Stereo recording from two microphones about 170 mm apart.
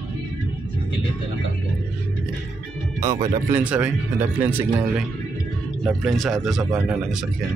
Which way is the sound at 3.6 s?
10° right (ahead or behind).